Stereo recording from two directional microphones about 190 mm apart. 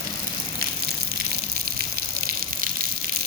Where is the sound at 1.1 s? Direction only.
55° right (ahead or behind).